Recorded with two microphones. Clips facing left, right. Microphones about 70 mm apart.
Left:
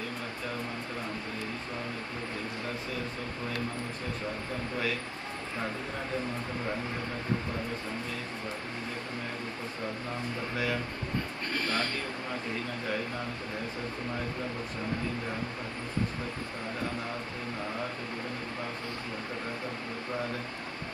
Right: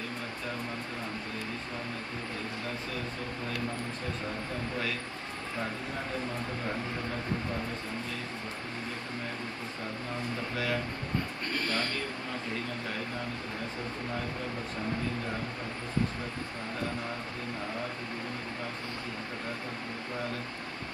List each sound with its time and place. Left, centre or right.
11.5 s speech: left